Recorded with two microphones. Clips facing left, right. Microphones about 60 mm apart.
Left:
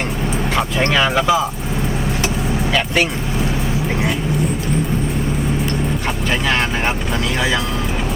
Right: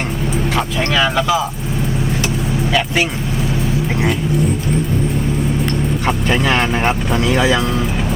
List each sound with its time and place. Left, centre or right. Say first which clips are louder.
0.5 s speech: left 2 dB; centre
1.0 s speech: even; centre
2.7 s speech: right 1 dB; centre
6.3 s speech: right 2 dB; centre
7.3 s speech: right 4 dB; centre